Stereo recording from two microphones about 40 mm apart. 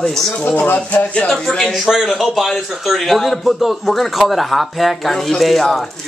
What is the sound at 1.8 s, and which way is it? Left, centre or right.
A man's voice, centre.